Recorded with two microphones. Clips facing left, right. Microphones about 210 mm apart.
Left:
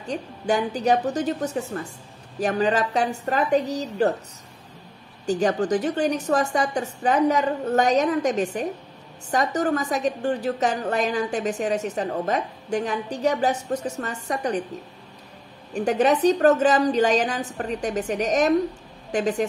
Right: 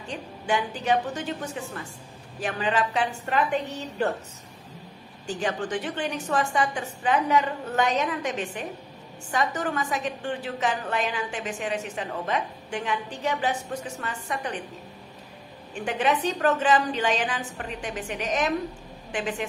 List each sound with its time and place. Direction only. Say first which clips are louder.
0.1 s a woman's voice: left 4 dB; 40° left (ahead or behind)
5.2 s a woman's voice: left 7 dB; 40° left (ahead or behind)
15.7 s a woman's voice: left 6 dB; 40° left (ahead or behind)